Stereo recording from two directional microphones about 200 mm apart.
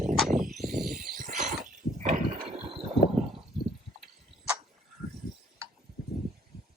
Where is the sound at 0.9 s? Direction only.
40° right (ahead or behind).